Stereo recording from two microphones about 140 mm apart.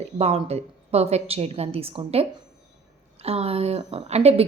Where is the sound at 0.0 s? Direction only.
45° right (ahead or behind).